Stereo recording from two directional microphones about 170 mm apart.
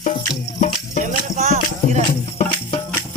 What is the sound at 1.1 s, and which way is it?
Music, 45° right (ahead or behind).